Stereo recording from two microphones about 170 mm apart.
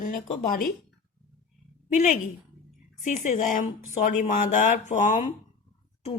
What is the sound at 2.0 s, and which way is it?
Speech, 50° left (ahead or behind).